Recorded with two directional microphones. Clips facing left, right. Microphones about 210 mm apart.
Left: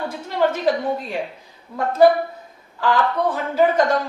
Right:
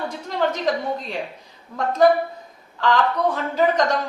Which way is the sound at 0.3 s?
5° left (ahead or behind).